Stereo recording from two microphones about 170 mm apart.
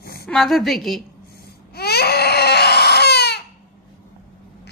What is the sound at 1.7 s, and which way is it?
Crying, 70° left (ahead or behind).